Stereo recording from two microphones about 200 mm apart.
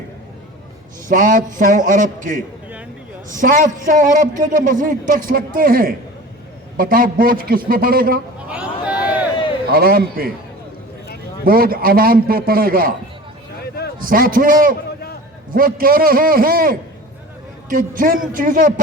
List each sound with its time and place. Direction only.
1.0 s a man's voice: 40° right (ahead or behind)
8.4 s a sound: 5° right (ahead or behind)
9.7 s a man's voice: 50° right (ahead or behind)
11.4 s a man's voice: 45° right (ahead or behind)
14.0 s a man's voice: 45° right (ahead or behind)